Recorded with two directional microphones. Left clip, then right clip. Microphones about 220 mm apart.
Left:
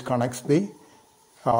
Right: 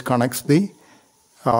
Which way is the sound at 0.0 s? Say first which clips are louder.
Right 5 dB; 30° right (ahead or behind).